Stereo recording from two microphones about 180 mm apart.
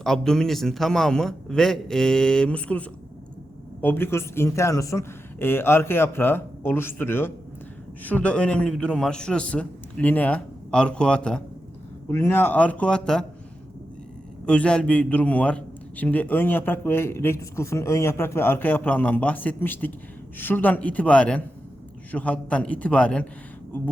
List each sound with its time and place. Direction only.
0.0 s a man's voice: centre (ahead or behind)
14.4 s a man's voice: 5° left (ahead or behind)